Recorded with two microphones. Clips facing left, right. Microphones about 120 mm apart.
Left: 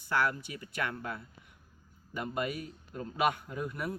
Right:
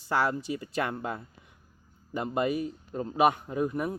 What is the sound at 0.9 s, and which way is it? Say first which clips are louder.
Speech: right 5 dB; 30° right (ahead or behind).